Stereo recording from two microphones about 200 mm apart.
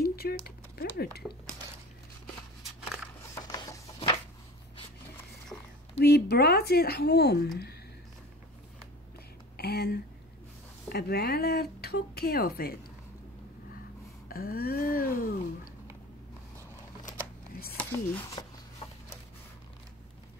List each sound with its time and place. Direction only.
0.0 s typing: 50° left (ahead or behind)
1.2 s speech: centre (ahead or behind)
3.4 s printer: 20° left (ahead or behind)
5.5 s a sound: 5° left (ahead or behind)
5.9 s speech: 55° left (ahead or behind)
9.6 s speech: 50° left (ahead or behind)
14.3 s speech: 50° left (ahead or behind)
17.7 s a sound: 10° left (ahead or behind)
18.8 s a sound: 30° left (ahead or behind)